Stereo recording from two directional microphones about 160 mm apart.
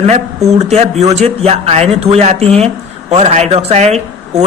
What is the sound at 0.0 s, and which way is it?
Speech, 40° right (ahead or behind).